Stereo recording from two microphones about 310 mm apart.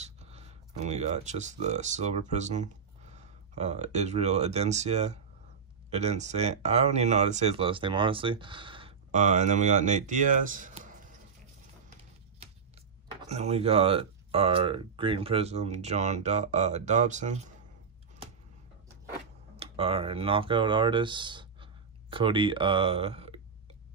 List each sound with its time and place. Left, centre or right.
0.0 s speech: right
13.3 s speech: right
19.5 s speech: centre